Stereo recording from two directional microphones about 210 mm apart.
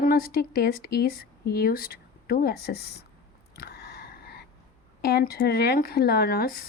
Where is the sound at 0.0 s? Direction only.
45° left (ahead or behind).